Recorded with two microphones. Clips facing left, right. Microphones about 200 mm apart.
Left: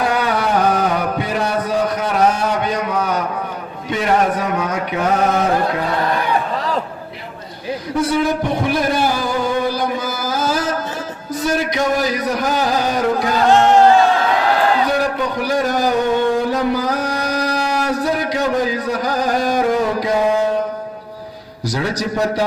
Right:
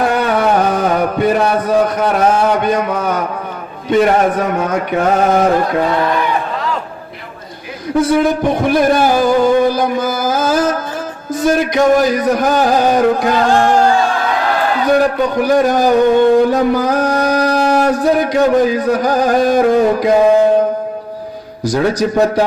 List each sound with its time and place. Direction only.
0.2 s carnatic music: 55° right (ahead or behind)
0.9 s mantra: 50° right (ahead or behind)
2.0 s a man's voice: 50° right (ahead or behind)
2.6 s a sound: 50° right (ahead or behind)
3.9 s a man's voice: 50° right (ahead or behind)
7.9 s a sound: 50° right (ahead or behind)
11.3 s a man's voice: 50° right (ahead or behind)
13.5 s speech: 20° left (ahead or behind)
14.8 s a man's voice: 50° right (ahead or behind)
21.6 s a man's voice: 50° right (ahead or behind)